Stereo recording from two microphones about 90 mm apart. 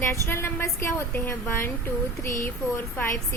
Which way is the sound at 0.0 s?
30° left (ahead or behind).